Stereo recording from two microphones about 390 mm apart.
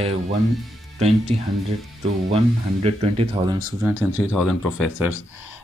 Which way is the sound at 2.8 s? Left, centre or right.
Centre.